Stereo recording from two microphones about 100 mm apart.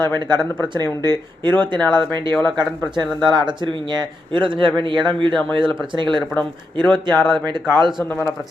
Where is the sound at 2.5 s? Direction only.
50° right (ahead or behind).